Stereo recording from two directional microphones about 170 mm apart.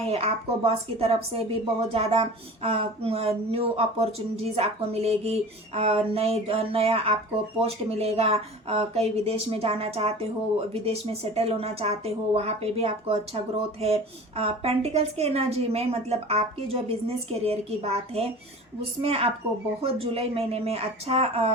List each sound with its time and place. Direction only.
0.1 s speech: 35° right (ahead or behind)